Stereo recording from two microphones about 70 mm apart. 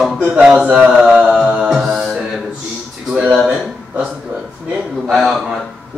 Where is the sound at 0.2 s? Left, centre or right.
Centre.